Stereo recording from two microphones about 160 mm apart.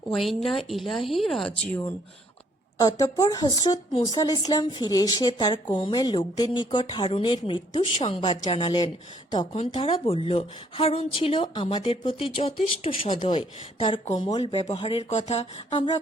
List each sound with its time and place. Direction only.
0.1 s speech: centre (ahead or behind)
2.7 s speech: 20° left (ahead or behind)